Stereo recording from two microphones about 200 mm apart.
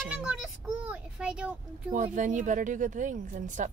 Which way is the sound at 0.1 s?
5° right (ahead or behind).